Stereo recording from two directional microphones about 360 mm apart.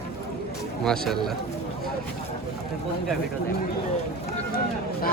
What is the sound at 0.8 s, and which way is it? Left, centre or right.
Speech, centre.